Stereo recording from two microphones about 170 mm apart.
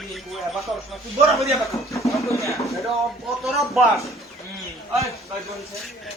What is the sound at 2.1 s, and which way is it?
Speech, 20° left (ahead or behind).